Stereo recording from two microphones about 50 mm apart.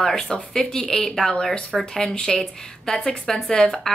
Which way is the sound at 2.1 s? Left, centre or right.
Centre.